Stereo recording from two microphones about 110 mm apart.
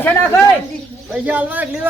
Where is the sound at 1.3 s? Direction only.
15° right (ahead or behind).